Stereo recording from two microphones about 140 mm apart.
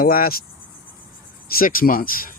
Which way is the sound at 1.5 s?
90° left.